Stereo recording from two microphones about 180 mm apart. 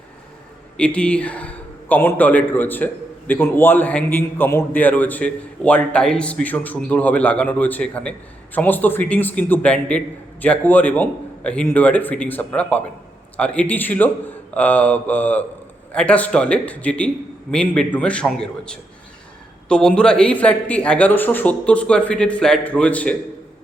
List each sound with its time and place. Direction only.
0.8 s a man's voice: 5° left (ahead or behind)